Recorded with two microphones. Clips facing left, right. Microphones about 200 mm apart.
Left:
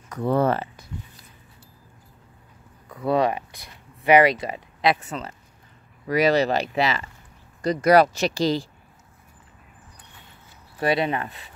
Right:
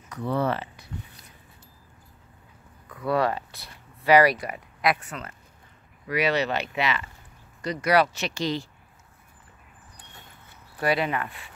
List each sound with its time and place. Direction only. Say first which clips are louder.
0.1 s speech: left 5 dB; 50° left (ahead or behind)
2.9 s speech: left 3 dB; 25° left (ahead or behind)
6.0 s speech: left 5 dB; 40° left (ahead or behind)
7.6 s speech: left 6 dB; 45° left (ahead or behind)
10.8 s speech: left 2 dB; 25° left (ahead or behind)